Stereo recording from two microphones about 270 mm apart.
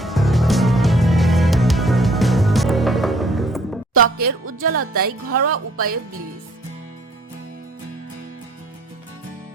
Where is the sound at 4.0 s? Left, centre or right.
Right.